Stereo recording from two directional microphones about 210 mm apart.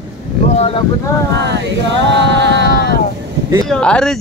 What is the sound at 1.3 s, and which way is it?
Music, 55° right (ahead or behind).